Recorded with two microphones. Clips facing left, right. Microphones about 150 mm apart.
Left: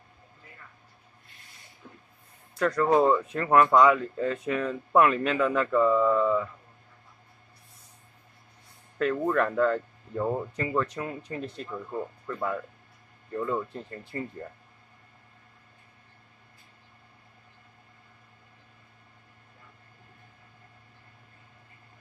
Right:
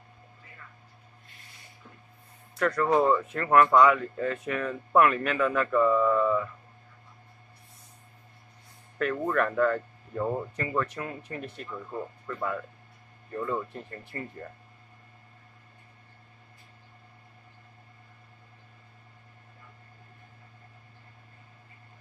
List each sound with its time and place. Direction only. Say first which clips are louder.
2.6 s speech: left 2 dB; 15° left (ahead or behind)
9.1 s speech: left 1 dB; 10° left (ahead or behind)
10.5 s speech: left 2 dB; 15° left (ahead or behind)
12.3 s speech: even; 5° left (ahead or behind)
14.1 s speech: left 4 dB; 20° left (ahead or behind)